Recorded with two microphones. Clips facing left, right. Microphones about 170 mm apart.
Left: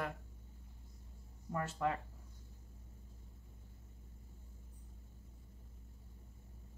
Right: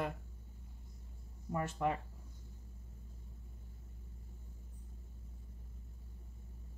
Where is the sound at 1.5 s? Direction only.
15° right (ahead or behind).